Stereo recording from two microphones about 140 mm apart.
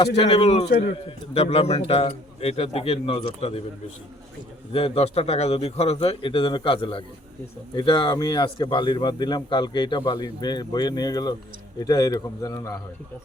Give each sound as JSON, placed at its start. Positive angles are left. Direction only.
{"t": 0.3, "sound": "a man's voice", "side_deg": 45}
{"t": 4.7, "sound": "a man's voice", "side_deg": 45}